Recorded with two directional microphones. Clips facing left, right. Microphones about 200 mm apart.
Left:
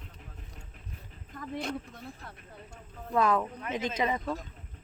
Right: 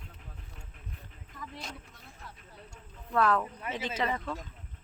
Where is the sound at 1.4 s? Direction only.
55° left (ahead or behind).